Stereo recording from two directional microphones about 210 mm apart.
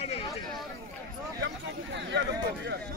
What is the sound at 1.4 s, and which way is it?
Speech, 55° right (ahead or behind).